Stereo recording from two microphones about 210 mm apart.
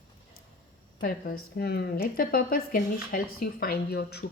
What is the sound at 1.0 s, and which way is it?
A woman's voice, 45° left (ahead or behind).